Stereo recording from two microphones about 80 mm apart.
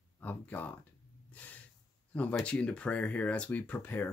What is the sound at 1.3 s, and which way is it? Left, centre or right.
Snort, centre.